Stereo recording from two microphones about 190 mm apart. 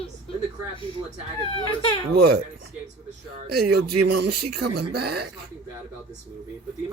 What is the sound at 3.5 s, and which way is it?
Speech, 55° right (ahead or behind).